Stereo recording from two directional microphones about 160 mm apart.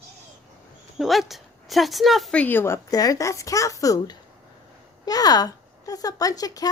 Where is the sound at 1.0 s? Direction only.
Centre (ahead or behind).